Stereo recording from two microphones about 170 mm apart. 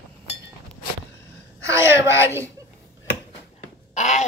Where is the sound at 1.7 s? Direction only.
15° right (ahead or behind).